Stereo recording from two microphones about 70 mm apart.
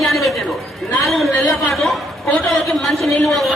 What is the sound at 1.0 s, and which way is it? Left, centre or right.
A woman's voice, centre.